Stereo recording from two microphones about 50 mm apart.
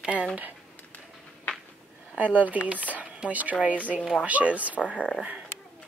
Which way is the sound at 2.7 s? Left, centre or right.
Right.